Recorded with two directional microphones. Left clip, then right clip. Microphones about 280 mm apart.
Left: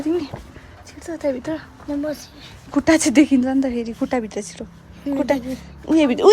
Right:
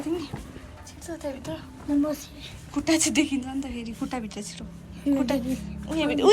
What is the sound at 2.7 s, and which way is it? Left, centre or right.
A woman's voice, left.